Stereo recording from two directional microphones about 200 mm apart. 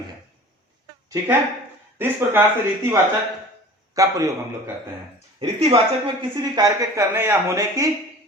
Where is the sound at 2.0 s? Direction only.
10° right (ahead or behind).